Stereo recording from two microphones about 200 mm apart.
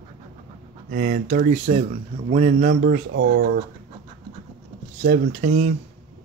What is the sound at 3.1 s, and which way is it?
Speech, 60° right (ahead or behind).